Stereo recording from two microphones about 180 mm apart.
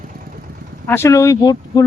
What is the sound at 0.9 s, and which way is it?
Speech, 15° left (ahead or behind).